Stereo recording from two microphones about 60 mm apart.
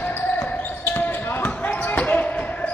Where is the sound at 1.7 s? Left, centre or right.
Left.